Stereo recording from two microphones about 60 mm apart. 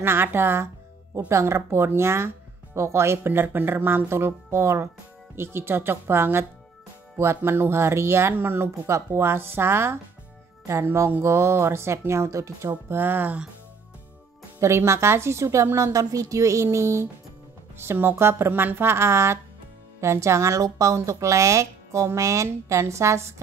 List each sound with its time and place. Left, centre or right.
0.0 s speech: right
1.1 s speech: right
12.9 s speech: right
14.6 s speech: right